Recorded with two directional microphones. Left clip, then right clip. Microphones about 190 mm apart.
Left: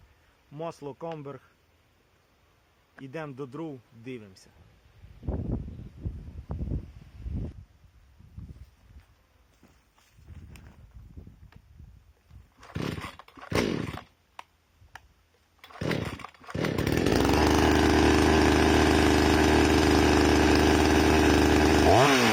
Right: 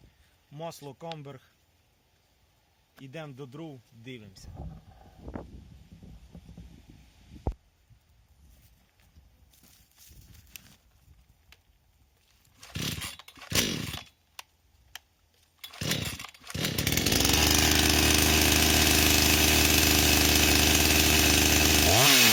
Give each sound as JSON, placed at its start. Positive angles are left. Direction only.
{"t": 0.5, "sound": "speech", "side_deg": -20}
{"t": 3.0, "sound": "speech", "side_deg": -20}
{"t": 12.5, "sound": "chainsaw", "side_deg": -35}
{"t": 15.6, "sound": "chainsaw", "side_deg": -35}